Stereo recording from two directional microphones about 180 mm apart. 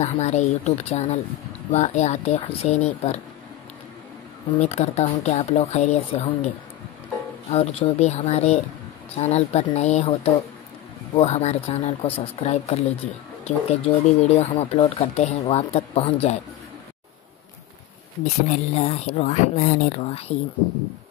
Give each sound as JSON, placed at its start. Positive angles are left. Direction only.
{"t": 0.0, "sound": "speech", "side_deg": 35}
{"t": 4.6, "sound": "speech", "side_deg": 35}
{"t": 7.5, "sound": "speech", "side_deg": 35}
{"t": 18.2, "sound": "speech", "side_deg": 40}